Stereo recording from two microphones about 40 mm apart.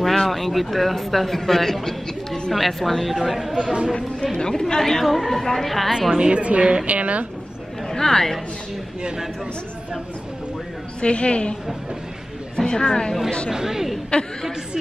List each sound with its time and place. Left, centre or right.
0.0 s speech: centre
4.4 s a woman's voice: centre
6.1 s a woman's voice: right
7.9 s a woman's voice: centre
11.0 s a woman's voice: left
12.5 s a woman's voice: centre
13.5 s speech: centre
14.1 s a woman's voice: left